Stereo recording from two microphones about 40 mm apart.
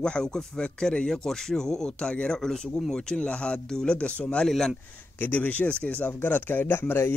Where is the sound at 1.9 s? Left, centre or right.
Left.